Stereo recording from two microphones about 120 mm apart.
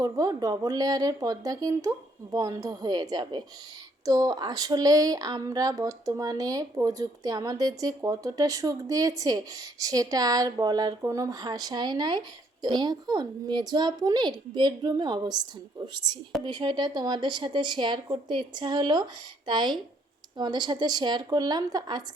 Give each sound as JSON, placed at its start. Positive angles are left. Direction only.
{"t": 0.0, "sound": "speech", "side_deg": -30}